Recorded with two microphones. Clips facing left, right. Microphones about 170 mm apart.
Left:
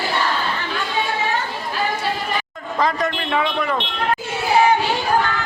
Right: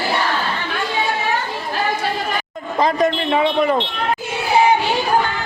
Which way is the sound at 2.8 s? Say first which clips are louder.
Right 4 dB; 20° right (ahead or behind).